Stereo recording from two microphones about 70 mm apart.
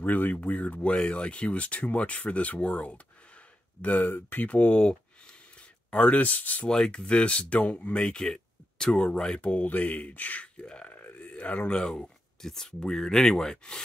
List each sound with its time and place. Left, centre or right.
0.0 s speech: left; by 13.7 s centre